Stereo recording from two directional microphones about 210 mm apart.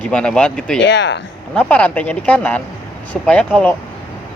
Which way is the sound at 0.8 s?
60° left (ahead or behind).